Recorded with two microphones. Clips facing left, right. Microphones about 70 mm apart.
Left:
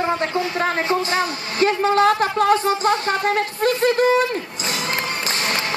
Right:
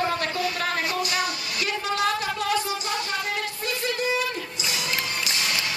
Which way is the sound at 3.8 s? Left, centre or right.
Left.